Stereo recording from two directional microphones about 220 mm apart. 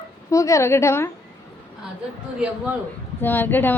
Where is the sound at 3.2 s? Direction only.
10° left (ahead or behind).